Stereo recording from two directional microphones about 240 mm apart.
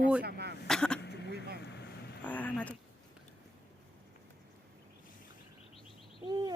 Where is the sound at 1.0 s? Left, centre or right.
Left.